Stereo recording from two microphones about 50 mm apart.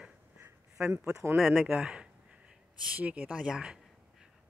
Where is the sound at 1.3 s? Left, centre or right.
Centre.